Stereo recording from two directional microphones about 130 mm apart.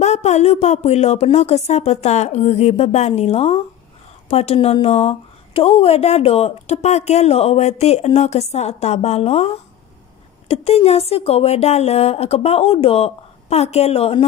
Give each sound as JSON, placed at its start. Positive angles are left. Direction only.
{"t": 0.0, "sound": "speech", "side_deg": 60}